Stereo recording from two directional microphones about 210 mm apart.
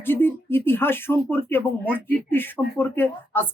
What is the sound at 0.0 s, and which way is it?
Speech, 10° left (ahead or behind).